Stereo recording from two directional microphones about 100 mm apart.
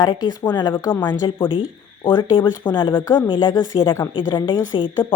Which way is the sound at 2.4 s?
20° left (ahead or behind).